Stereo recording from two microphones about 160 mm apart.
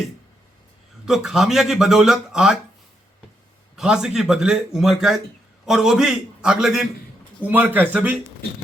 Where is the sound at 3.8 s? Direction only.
5° right (ahead or behind).